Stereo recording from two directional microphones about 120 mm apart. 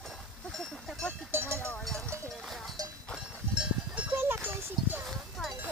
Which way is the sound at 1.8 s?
5° left (ahead or behind).